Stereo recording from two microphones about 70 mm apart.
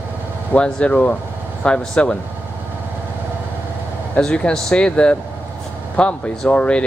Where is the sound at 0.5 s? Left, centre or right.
Centre.